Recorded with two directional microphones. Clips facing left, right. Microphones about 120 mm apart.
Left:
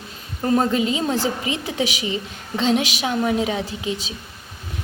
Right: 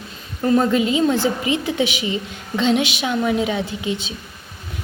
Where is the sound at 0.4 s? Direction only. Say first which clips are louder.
Right 2 dB; 35° left (ahead or behind).